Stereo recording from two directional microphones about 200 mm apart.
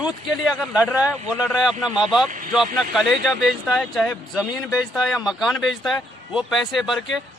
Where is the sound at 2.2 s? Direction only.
40° right (ahead or behind).